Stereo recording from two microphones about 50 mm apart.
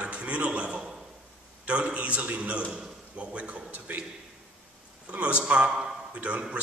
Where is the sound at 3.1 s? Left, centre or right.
Right.